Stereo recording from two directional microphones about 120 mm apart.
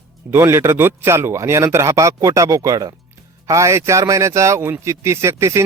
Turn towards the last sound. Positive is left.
turn(degrees=-25)  # may be behind; listen again after turning